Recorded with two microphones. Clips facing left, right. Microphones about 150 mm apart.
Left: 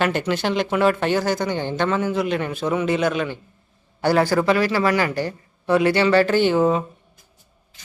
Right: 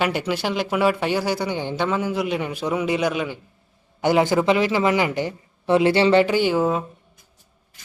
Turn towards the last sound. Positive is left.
turn(degrees=0)  # may be behind; listen again after turning